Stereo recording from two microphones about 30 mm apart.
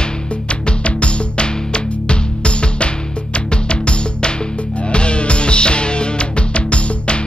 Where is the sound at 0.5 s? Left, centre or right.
Left.